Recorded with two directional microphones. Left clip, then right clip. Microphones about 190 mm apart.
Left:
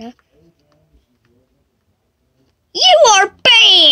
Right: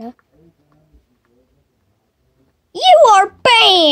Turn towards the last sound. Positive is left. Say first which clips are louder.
# left 2 dB
turn(degrees=0)  # may be behind; listen again after turning